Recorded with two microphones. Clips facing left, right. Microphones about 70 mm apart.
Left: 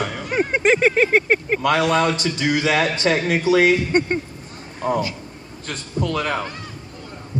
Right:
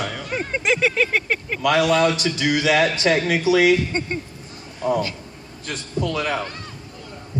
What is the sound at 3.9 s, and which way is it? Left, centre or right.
Speech, left.